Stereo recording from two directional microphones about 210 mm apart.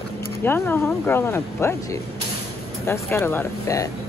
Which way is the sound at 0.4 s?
10° left (ahead or behind).